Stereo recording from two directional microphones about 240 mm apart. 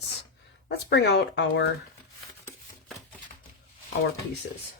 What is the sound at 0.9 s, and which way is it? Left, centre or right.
Speech, left.